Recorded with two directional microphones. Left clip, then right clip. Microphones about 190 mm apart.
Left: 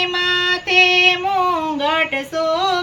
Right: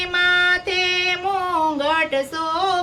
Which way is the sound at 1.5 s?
15° right (ahead or behind).